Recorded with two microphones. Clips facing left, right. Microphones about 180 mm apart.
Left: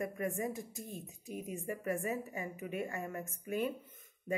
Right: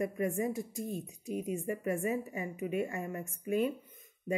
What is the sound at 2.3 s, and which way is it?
A woman's voice, 20° right (ahead or behind).